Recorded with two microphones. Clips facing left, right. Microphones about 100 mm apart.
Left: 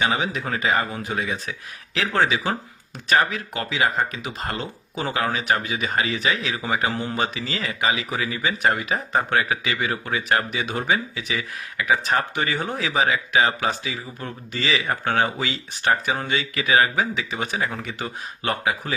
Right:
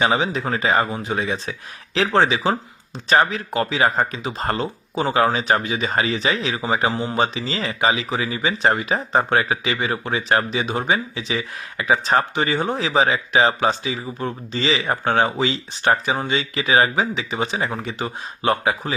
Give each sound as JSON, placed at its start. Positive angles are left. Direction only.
{"t": 0.0, "sound": "speech", "side_deg": -30}